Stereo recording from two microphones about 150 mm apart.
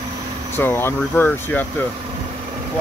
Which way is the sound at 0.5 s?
15° left (ahead or behind).